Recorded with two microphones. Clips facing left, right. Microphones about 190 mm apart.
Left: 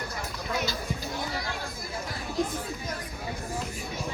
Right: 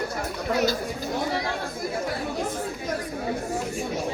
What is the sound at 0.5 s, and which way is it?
Speech, 40° right (ahead or behind).